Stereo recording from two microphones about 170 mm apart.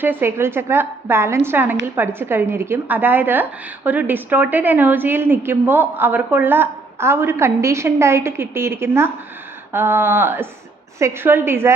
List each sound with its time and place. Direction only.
0.0 s a woman's voice: 10° right (ahead or behind)